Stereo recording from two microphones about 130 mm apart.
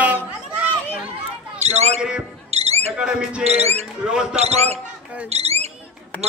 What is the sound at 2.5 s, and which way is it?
Owl, 55° right (ahead or behind).